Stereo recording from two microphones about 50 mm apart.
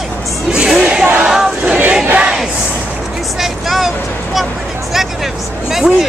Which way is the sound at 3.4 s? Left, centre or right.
Centre.